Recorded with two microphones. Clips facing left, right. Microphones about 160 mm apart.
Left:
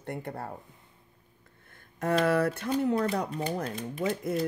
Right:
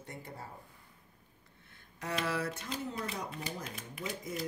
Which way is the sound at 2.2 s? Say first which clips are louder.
Left 10 dB; 55° left (ahead or behind).